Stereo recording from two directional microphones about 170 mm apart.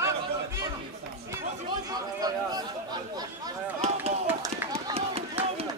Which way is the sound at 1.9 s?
20° right (ahead or behind).